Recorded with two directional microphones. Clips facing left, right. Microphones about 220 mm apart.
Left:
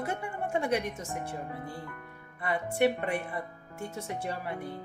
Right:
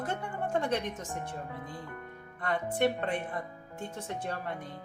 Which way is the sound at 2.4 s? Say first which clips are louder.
Left 2 dB; 10° left (ahead or behind).